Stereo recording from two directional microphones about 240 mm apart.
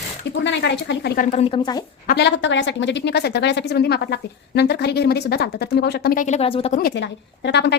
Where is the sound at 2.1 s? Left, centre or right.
Left.